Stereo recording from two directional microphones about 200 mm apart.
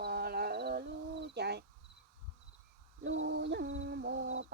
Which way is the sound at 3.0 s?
65° right (ahead or behind).